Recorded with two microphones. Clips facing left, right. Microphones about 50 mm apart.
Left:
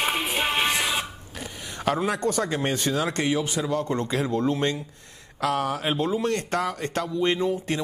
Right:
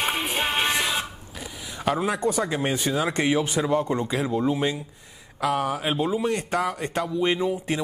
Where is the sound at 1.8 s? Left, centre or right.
Centre; by 3.8 s right.